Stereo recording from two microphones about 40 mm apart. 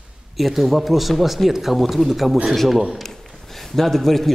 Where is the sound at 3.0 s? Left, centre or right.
Centre.